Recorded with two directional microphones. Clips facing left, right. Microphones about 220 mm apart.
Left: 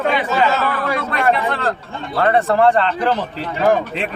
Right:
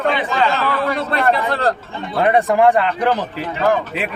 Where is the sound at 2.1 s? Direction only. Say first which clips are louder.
Right 1 dB; 15° right (ahead or behind).